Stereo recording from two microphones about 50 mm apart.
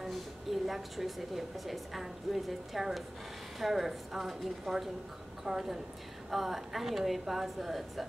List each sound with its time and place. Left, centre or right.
0.0 s a woman's voice: centre